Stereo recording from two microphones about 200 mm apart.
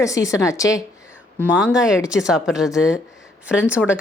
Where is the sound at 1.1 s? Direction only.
5° right (ahead or behind).